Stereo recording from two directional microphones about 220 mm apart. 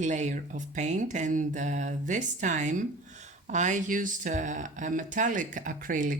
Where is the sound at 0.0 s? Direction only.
35° right (ahead or behind).